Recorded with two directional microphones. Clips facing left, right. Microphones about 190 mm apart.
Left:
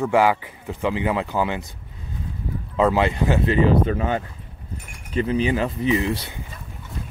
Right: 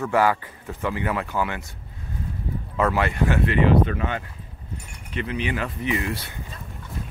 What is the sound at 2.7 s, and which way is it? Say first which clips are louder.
Speech: left 3 dB; 20° left (ahead or behind).